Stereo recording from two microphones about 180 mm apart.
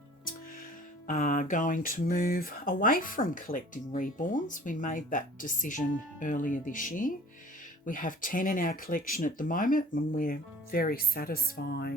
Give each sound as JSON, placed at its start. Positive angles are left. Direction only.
{"t": 1.0, "sound": "speech", "side_deg": 45}